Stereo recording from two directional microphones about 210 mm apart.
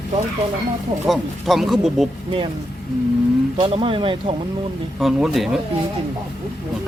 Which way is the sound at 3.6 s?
25° right (ahead or behind).